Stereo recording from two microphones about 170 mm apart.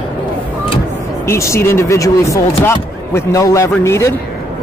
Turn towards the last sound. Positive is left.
turn(degrees=15)  # may be behind; listen again after turning